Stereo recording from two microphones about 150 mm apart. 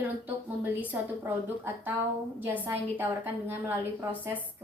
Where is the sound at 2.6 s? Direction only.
15° right (ahead or behind).